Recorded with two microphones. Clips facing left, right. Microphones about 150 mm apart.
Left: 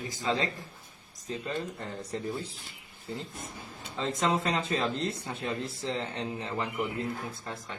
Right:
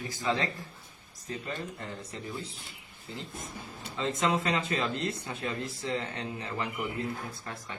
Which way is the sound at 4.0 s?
35° left (ahead or behind).